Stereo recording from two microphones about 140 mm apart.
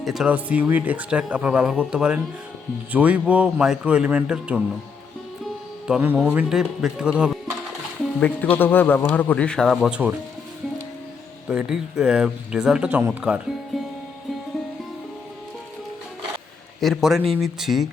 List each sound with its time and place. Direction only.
0.0 s speech: 5° right (ahead or behind)
5.9 s speech: 15° right (ahead or behind)
8.2 s speech: 10° left (ahead or behind)
9.9 s speech: 10° right (ahead or behind)
11.4 s speech: 5° right (ahead or behind)
16.8 s speech: centre (ahead or behind)